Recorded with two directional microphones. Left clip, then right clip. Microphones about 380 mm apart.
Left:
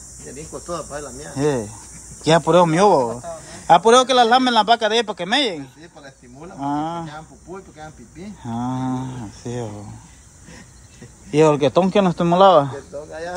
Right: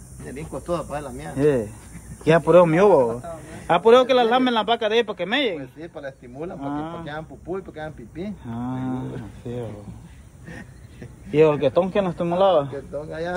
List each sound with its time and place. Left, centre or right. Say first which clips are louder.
0.5 s speech: right 2 dB; right
1.3 s a man's voice: right 1 dB; centre
6.6 s a man's voice: left 9 dB; centre
7.7 s speech: right 4 dB; centre
8.5 s a man's voice: left 7 dB; centre
11.3 s a man's voice: left 2 dB; centre